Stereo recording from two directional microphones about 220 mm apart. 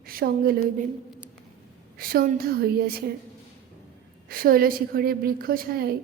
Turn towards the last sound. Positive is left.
turn(degrees=-45)  # may be behind; listen again after turning